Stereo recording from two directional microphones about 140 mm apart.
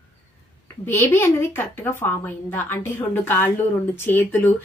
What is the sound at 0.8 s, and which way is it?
A woman's voice, 15° left (ahead or behind).